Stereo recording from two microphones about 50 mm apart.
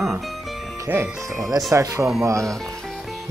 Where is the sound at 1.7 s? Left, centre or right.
Right.